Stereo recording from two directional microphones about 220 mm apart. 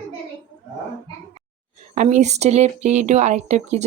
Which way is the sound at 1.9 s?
30° right (ahead or behind).